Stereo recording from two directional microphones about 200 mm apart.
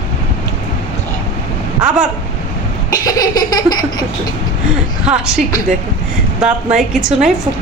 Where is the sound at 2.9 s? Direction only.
20° left (ahead or behind).